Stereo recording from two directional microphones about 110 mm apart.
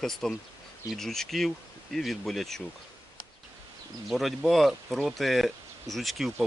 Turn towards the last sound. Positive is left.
turn(degrees=0)  # may be behind; listen again after turning